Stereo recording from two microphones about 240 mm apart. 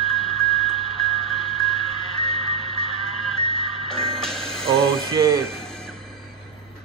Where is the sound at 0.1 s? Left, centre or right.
Centre.